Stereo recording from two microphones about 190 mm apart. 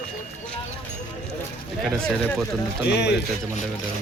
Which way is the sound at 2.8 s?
60° left (ahead or behind).